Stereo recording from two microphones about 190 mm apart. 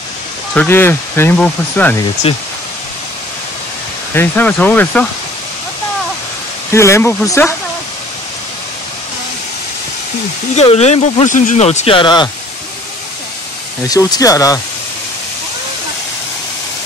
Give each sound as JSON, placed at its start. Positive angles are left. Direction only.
{"t": 0.6, "sound": "speech", "side_deg": 10}
{"t": 2.3, "sound": "speech", "side_deg": 30}
{"t": 4.1, "sound": "speech", "side_deg": 10}
{"t": 6.7, "sound": "speech", "side_deg": 15}
{"t": 10.5, "sound": "speech", "side_deg": 35}
{"t": 13.8, "sound": "speech", "side_deg": 20}